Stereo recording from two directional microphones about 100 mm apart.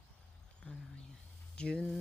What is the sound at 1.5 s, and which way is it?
Speech, 10° left (ahead or behind).